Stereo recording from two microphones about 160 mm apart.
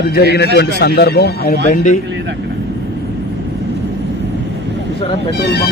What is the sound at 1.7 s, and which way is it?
Speech, 50° left (ahead or behind).